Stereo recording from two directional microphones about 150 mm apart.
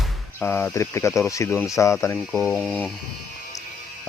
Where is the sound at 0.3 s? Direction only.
15° left (ahead or behind).